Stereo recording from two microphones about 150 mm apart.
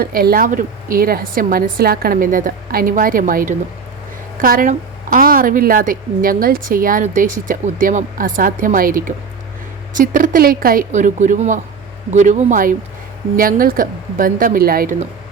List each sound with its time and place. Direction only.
0.0 s a woman's voice: 80° right